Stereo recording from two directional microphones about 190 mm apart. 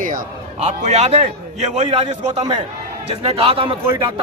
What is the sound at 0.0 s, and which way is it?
A man's voice, 45° right (ahead or behind).